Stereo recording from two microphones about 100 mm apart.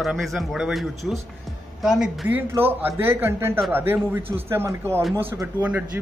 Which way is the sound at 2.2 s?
20° right (ahead or behind).